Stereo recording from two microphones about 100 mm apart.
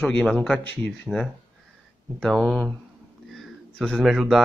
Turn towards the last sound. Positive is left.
turn(degrees=0)  # may be behind; listen again after turning